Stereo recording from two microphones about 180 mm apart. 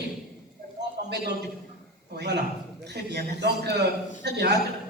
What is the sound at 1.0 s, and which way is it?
A man's voice, 65° right (ahead or behind).